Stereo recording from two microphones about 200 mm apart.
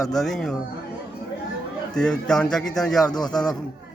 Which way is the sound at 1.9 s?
5° left (ahead or behind).